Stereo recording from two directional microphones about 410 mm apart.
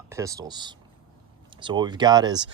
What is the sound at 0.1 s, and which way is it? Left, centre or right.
Speech, centre.